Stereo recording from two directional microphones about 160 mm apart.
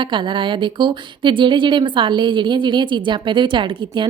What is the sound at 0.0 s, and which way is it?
Speech, 30° right (ahead or behind).